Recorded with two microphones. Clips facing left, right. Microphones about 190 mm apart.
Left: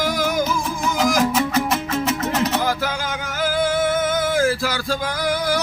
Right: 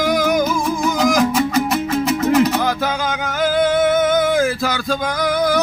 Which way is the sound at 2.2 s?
20° right (ahead or behind).